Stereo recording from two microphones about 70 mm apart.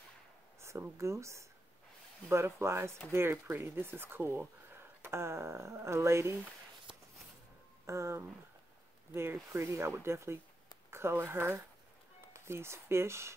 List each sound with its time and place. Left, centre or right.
0.6 s speech: right
7.8 s speech: right
9.1 s speech: right